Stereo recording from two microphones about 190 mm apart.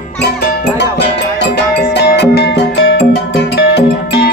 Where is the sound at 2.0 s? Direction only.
60° left (ahead or behind).